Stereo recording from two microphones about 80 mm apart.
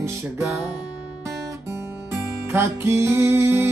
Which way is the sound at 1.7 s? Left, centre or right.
Right.